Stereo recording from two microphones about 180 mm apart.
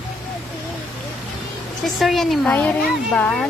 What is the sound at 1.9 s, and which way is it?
A woman's voice, centre (ahead or behind).